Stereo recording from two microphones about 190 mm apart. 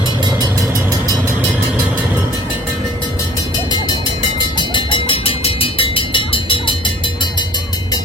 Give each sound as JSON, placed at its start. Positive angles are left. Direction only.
{"t": 0.3, "sound": "vehicle", "side_deg": -20}
{"t": 4.4, "sound": "vehicle", "side_deg": 25}